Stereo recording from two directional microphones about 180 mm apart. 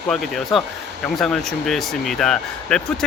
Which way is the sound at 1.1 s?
Centre (ahead or behind).